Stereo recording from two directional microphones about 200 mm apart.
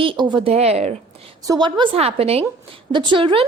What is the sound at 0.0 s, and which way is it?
A woman's voice, 25° right (ahead or behind).